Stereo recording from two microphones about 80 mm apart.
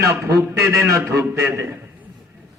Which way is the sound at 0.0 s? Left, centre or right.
Right.